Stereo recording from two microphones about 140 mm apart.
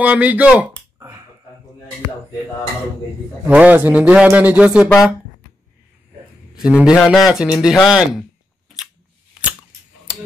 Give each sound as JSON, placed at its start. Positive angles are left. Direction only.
{"t": 0.0, "sound": "speech", "side_deg": -10}
{"t": 0.7, "sound": "a sound", "side_deg": -20}
{"t": 3.4, "sound": "speech", "side_deg": -10}
{"t": 6.5, "sound": "a man's voice", "side_deg": -5}